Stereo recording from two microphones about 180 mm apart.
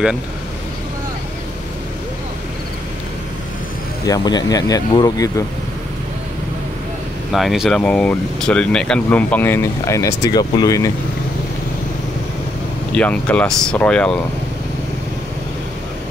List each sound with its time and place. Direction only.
4.0 s speech: 20° left (ahead or behind)
7.3 s speech: centre (ahead or behind); by 10.9 s 20° left (ahead or behind)
12.9 s speech: 5° left (ahead or behind)